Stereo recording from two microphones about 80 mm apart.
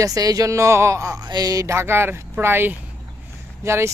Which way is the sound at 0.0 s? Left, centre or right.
Right.